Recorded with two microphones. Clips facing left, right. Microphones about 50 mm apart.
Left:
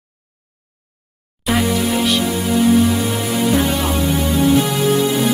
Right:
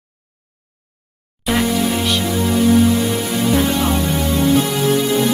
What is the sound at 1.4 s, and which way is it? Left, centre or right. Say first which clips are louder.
Music: even; centre.